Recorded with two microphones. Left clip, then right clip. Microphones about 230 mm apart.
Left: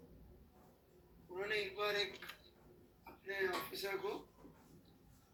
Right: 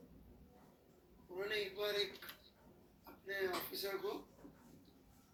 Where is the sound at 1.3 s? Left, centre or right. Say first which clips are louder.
Left 1 dB; centre.